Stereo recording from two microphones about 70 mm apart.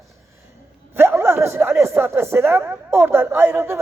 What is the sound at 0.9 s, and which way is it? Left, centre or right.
Speech, right.